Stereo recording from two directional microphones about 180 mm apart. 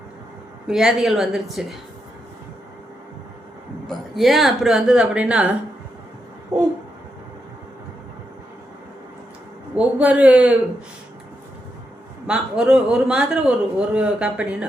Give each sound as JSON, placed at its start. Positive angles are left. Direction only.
{"t": 0.7, "sound": "a man's voice", "side_deg": 0}
{"t": 3.8, "sound": "a man's voice", "side_deg": 0}
{"t": 9.7, "sound": "a man's voice", "side_deg": -5}
{"t": 12.3, "sound": "a man's voice", "side_deg": -5}